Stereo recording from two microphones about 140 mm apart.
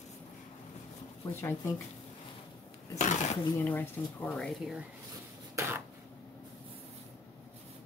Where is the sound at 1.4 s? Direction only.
20° left (ahead or behind).